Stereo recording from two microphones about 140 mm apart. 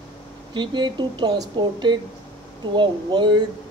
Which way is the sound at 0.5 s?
35° right (ahead or behind).